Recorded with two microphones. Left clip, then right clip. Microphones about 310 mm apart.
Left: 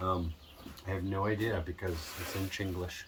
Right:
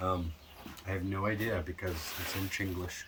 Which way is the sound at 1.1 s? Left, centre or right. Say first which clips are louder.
Left 1 dB; centre.